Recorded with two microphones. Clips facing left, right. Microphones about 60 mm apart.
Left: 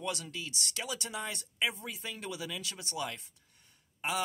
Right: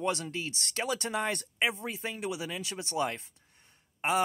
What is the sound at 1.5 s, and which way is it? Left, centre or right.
Speech, right.